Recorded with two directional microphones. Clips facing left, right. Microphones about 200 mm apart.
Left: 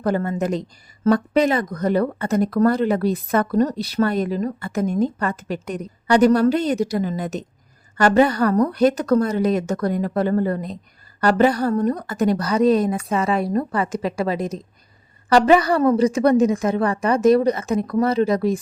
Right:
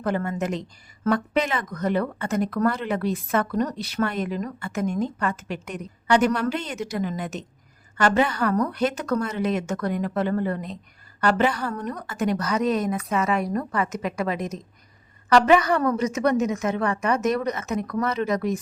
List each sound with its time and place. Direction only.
0.0 s speech: 35° left (ahead or behind)